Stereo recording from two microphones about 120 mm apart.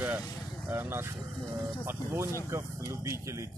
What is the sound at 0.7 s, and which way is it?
Speech, 20° right (ahead or behind).